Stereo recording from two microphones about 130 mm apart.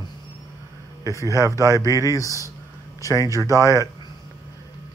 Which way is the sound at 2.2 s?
25° left (ahead or behind).